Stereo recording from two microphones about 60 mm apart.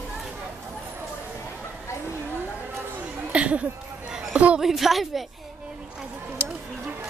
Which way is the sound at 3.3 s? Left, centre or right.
Right.